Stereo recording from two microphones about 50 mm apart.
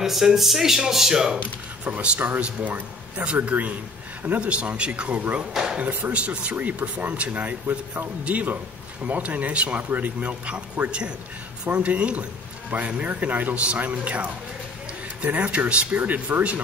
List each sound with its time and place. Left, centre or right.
0.0 s speech: centre
1.9 s speech: right
5.5 s a sound: centre
5.8 s speech: right